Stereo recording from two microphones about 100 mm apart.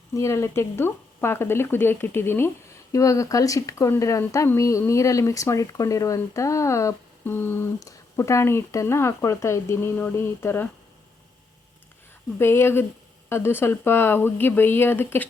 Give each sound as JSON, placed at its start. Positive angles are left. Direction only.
{"t": 0.1, "sound": "speech", "side_deg": 30}
{"t": 12.4, "sound": "speech", "side_deg": 25}